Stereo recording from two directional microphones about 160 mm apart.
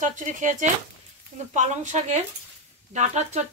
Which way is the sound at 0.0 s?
55° right (ahead or behind).